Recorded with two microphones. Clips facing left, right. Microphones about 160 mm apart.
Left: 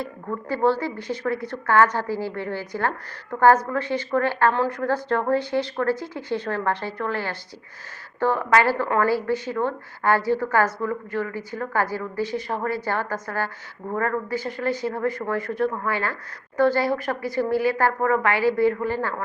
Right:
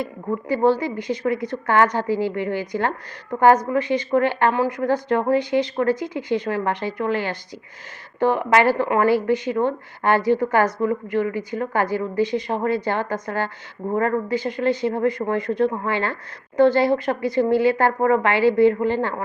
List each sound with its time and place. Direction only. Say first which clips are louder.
0.0 s a woman's voice: right 4 dB; 15° right (ahead or behind)